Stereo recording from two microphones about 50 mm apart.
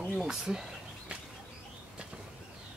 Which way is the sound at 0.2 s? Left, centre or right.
Centre.